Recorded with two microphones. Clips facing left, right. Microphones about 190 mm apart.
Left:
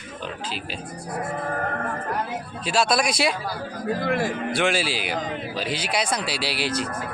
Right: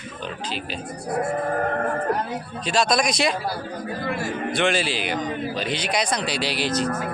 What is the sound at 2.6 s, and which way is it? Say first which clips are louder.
Speech: right 1 dB; 5° left (ahead or behind).